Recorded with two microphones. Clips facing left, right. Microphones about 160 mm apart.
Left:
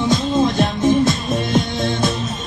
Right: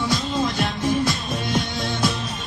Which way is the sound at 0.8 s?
45° left (ahead or behind).